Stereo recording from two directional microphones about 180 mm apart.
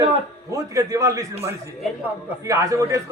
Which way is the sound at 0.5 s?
20° right (ahead or behind).